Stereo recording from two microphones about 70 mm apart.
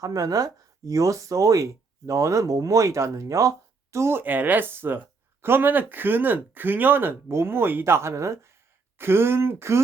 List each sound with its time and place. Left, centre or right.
0.0 s speech: right
3.9 s speech: right
4.2 s speech: right